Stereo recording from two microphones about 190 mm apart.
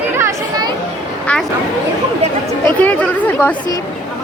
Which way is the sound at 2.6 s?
10° left (ahead or behind).